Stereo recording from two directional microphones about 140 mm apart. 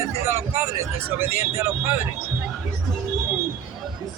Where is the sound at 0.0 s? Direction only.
20° right (ahead or behind).